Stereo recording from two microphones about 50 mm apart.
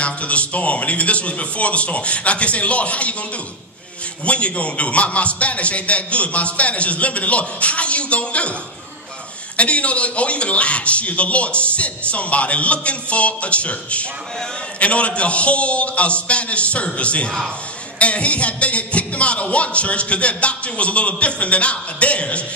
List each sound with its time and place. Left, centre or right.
0.0 s a man's voice: left
4.2 s a man's voice: left
9.6 s a man's voice: left